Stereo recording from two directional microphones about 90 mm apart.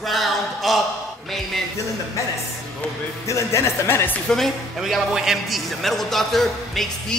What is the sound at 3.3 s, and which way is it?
Speech, 35° left (ahead or behind).